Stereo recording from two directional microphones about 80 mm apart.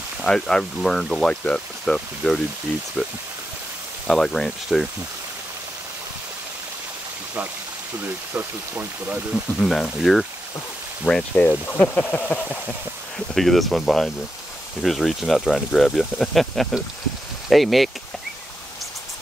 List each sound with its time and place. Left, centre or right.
0.2 s speech: centre
3.0 s speech: centre
4.1 s speech: centre
8.0 s speech: right
9.3 s speech: centre
11.1 s speech: centre
13.3 s speech: centre